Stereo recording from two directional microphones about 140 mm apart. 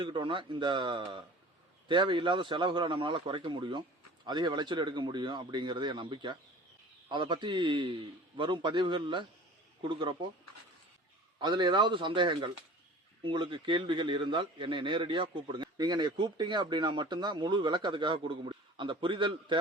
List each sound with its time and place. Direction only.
0.0 s a man's voice: 35° right (ahead or behind)
11.3 s a man's voice: 35° right (ahead or behind)